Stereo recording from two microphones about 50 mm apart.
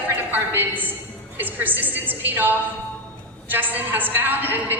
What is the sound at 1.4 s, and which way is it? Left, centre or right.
A woman's voice, right.